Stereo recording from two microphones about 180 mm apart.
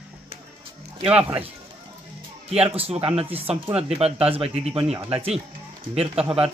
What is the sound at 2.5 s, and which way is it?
Speech, 35° right (ahead or behind).